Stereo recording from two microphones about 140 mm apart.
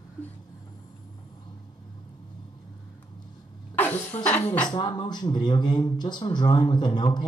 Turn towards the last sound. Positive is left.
turn(degrees=30)  # may be behind; listen again after turning